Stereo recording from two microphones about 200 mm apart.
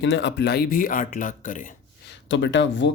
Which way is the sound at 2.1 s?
65° left (ahead or behind).